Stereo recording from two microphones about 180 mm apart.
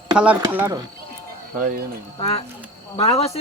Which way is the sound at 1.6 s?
50° right (ahead or behind).